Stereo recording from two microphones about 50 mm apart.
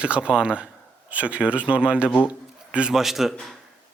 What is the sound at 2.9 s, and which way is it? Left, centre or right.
Speech, centre.